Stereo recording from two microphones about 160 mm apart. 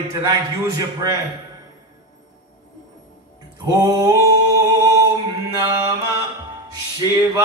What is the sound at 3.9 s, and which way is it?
Music, 25° right (ahead or behind).